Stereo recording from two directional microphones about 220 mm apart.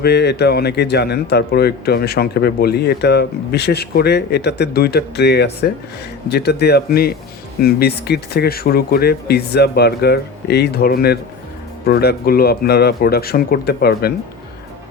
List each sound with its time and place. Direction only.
0.0 s a man's voice: 50° left (ahead or behind)